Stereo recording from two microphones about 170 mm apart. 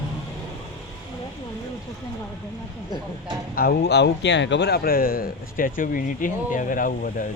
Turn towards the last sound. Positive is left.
turn(degrees=55)  # may be behind; listen again after turning